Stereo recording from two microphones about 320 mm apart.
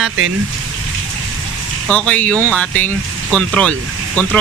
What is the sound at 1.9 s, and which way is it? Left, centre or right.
Speech, centre.